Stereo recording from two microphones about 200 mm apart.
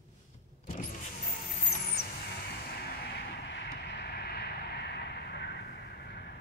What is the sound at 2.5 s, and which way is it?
Vehicle, 55° left (ahead or behind).